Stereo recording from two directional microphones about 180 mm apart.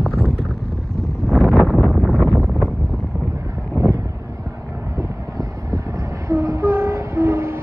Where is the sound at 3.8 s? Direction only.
15° right (ahead or behind).